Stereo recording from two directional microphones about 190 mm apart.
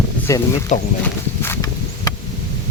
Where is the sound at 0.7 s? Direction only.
40° left (ahead or behind).